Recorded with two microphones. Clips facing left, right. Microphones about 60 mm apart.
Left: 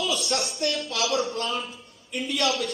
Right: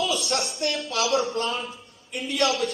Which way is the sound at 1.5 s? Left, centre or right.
Centre.